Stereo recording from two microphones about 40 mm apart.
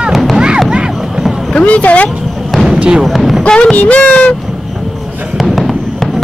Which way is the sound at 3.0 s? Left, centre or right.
Centre.